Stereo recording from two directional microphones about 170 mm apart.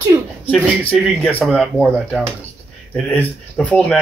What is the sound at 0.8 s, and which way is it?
Speech, 10° left (ahead or behind).